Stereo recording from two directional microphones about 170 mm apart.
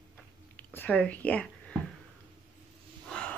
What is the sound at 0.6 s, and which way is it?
Speech, 10° left (ahead or behind).